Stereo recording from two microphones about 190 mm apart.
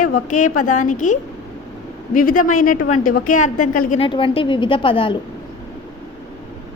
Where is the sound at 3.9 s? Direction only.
25° left (ahead or behind).